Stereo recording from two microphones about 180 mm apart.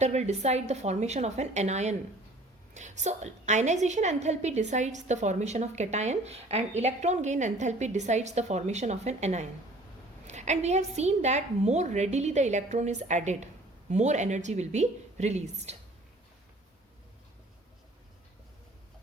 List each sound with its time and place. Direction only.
0.0 s a woman's voice: 40° right (ahead or behind)